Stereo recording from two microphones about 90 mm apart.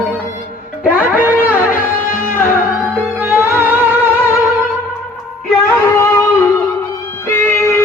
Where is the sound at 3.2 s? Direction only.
25° right (ahead or behind).